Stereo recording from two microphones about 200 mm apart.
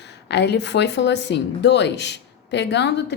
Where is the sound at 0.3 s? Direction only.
60° left (ahead or behind).